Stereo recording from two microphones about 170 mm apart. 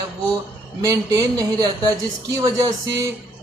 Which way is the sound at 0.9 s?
20° right (ahead or behind).